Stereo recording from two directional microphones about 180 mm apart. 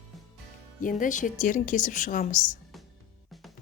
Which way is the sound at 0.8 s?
45° left (ahead or behind).